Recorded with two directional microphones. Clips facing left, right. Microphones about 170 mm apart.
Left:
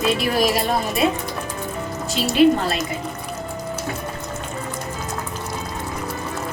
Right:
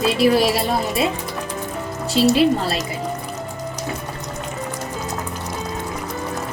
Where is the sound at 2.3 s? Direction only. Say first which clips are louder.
Left 1 dB; 30° right (ahead or behind).